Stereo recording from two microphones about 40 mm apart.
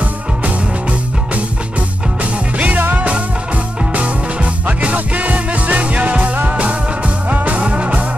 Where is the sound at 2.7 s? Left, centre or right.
Right.